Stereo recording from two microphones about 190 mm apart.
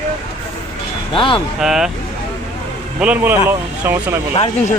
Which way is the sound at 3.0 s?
5° right (ahead or behind).